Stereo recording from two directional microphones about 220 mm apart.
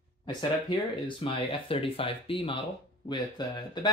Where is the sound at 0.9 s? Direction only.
25° left (ahead or behind).